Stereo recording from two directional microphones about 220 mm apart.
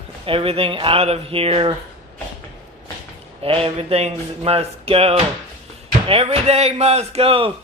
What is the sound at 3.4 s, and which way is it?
A man's voice, 25° right (ahead or behind).